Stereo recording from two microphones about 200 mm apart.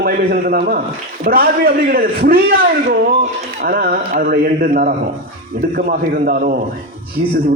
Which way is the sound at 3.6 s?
45° right (ahead or behind).